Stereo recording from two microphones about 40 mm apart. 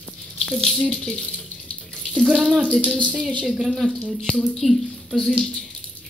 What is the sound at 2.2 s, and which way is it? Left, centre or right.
Speech, centre.